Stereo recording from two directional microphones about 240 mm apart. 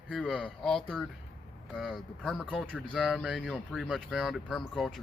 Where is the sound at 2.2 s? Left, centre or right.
Centre.